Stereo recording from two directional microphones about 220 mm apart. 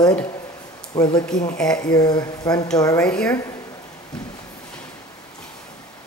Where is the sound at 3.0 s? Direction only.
5° left (ahead or behind).